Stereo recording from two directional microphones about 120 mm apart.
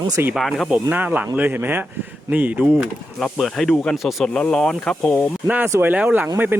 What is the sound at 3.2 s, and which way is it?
Speech, centre (ahead or behind).